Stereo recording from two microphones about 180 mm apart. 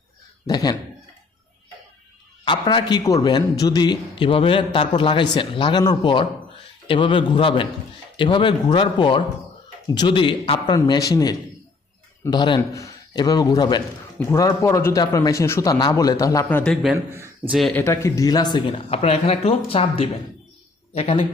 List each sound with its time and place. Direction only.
0.4 s a man's voice: 20° left (ahead or behind)
2.4 s a man's voice: 25° left (ahead or behind); by 16.7 s 10° left (ahead or behind)
16.8 s speech: 10° right (ahead or behind)
17.5 s speech: centre (ahead or behind)
17.7 s a man's voice: 15° left (ahead or behind); by 21.2 s 35° left (ahead or behind)